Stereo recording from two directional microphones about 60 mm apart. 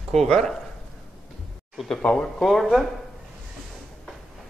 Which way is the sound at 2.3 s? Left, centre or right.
Centre.